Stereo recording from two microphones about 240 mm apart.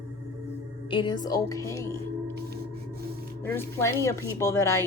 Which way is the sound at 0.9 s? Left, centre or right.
Centre.